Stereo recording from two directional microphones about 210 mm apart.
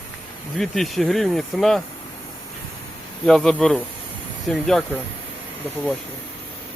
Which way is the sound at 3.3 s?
Centre (ahead or behind).